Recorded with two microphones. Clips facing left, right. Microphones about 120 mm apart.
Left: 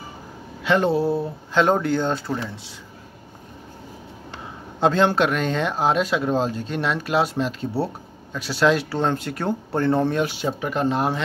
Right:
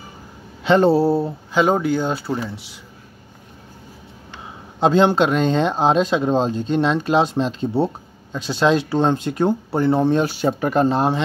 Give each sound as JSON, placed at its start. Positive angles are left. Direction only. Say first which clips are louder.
{"t": 0.7, "sound": "speech", "louder": "right 5 dB", "side_deg": -35}
{"t": 1.5, "sound": "speech", "louder": "right 1 dB", "side_deg": -5}
{"t": 4.7, "sound": "speech", "louder": "right 3 dB", "side_deg": -20}
{"t": 10.1, "sound": "speech", "louder": "right 5 dB", "side_deg": -40}